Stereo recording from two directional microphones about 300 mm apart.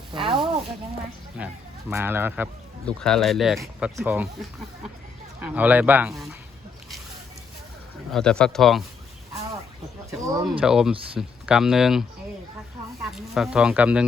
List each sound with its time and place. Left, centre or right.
0.1 s speech: centre
1.4 s speech: centre
5.4 s speech: centre
8.1 s speech: centre
10.1 s speech: centre